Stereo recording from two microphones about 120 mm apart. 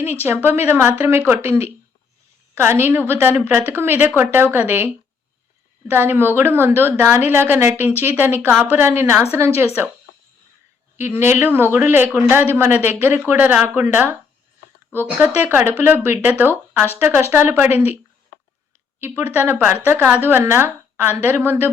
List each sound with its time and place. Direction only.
0.0 s a woman's voice: 20° right (ahead or behind)
5.9 s a woman's voice: 20° right (ahead or behind)
10.9 s a woman's voice: 20° right (ahead or behind)
15.4 s speech: 15° right (ahead or behind)
18.9 s speech: 20° right (ahead or behind)